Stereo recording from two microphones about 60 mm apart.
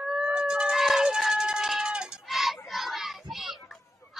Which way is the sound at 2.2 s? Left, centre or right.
Centre.